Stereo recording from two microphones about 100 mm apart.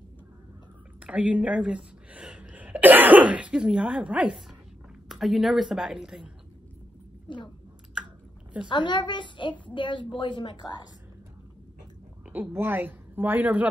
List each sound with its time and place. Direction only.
1.0 s a woman's voice: 15° right (ahead or behind)
8.6 s a woman's voice: 50° left (ahead or behind)
12.3 s a woman's voice: 20° right (ahead or behind)